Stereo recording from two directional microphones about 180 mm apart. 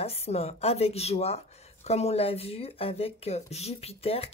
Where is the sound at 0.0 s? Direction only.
35° left (ahead or behind).